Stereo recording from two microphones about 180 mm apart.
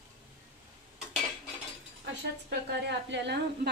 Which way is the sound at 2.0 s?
75° right (ahead or behind).